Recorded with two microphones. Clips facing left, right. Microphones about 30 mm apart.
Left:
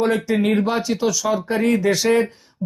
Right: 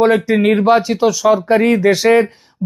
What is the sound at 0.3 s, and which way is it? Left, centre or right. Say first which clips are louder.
Speech: right 7 dB; centre.